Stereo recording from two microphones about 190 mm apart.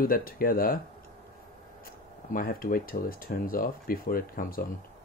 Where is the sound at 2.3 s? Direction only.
45° left (ahead or behind).